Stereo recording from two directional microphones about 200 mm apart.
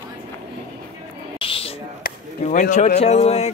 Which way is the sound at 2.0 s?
40° left (ahead or behind).